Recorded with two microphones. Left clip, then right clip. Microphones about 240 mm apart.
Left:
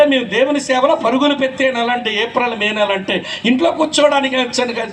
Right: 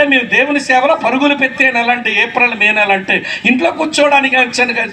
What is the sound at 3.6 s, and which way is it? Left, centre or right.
A man's voice, left.